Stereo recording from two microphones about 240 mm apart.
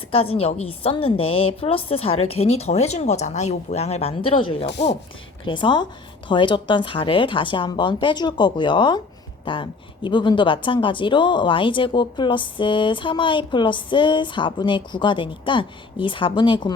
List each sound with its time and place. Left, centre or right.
0.1 s speech: left
4.6 s speech: left
5.5 s speech: centre